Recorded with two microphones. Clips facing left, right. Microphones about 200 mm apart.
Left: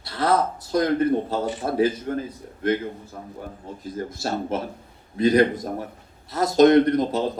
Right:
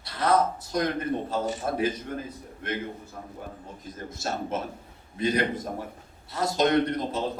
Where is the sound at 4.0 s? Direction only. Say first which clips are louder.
Left 5 dB; 35° left (ahead or behind).